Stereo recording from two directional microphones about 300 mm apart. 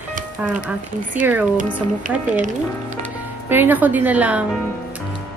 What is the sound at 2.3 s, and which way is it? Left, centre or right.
Speech, right.